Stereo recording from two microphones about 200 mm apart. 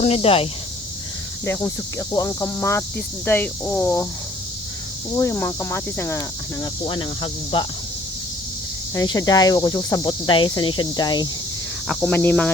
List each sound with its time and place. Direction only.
0.0 s speech: 30° left (ahead or behind)
1.5 s speech: 15° left (ahead or behind)
5.1 s speech: 15° left (ahead or behind)
9.0 s speech: 20° left (ahead or behind)
11.9 s speech: 5° left (ahead or behind)